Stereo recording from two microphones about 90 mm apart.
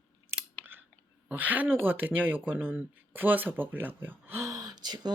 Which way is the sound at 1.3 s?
20° right (ahead or behind).